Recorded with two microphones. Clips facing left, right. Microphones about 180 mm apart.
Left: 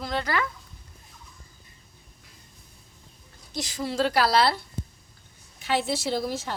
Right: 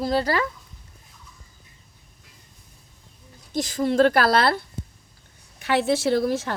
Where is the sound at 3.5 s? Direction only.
50° right (ahead or behind).